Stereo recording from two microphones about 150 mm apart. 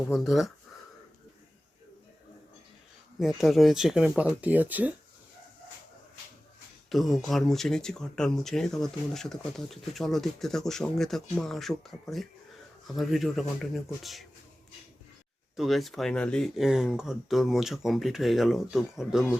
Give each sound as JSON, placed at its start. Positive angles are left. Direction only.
{"t": 0.0, "sound": "speech", "side_deg": 0}
{"t": 3.2, "sound": "speech", "side_deg": 0}
{"t": 6.9, "sound": "speech", "side_deg": 0}
{"t": 15.5, "sound": "speech", "side_deg": 0}